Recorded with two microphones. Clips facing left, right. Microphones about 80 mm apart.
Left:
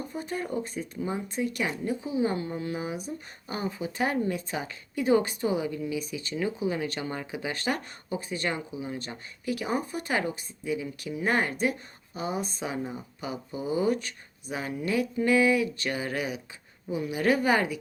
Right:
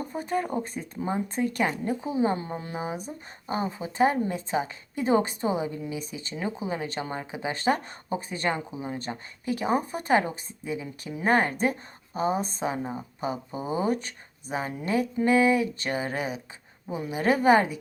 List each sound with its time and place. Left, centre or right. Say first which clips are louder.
0.1 s a woman's voice: right 5 dB; right